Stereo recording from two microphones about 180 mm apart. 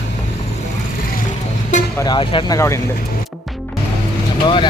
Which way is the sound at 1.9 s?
20° left (ahead or behind).